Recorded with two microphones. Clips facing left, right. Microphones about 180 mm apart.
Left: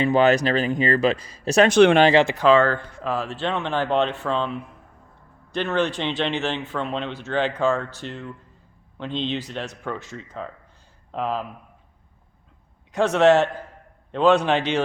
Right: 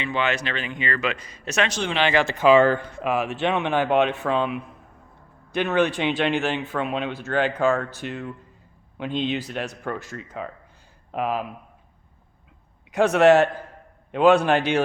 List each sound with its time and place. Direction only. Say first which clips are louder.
0.0 s speech: left 8 dB; 40° left (ahead or behind)
1.7 s speech: left 11 dB; 55° left (ahead or behind)
2.3 s speech: right 1 dB; 10° right (ahead or behind)
12.9 s speech: right 1 dB; 10° right (ahead or behind)